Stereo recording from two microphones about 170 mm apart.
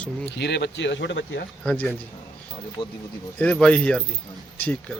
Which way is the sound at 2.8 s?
30° left (ahead or behind).